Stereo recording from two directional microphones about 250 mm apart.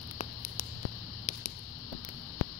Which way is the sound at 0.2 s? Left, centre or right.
Left.